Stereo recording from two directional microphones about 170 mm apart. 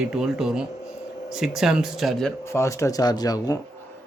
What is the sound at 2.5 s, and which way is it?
Speech, 15° left (ahead or behind).